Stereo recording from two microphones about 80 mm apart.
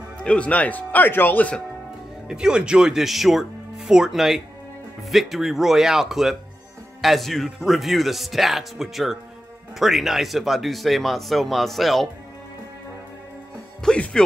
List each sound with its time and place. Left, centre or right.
0.2 s speech: centre
2.2 s speech: centre
13.8 s speech: centre